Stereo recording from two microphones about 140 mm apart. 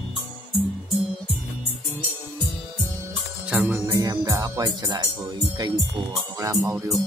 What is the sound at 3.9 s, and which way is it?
Speech, 25° right (ahead or behind).